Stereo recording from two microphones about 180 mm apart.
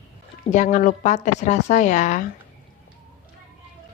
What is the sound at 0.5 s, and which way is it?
A woman's voice, 45° left (ahead or behind).